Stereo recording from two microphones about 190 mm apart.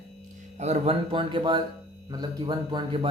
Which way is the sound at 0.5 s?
35° right (ahead or behind).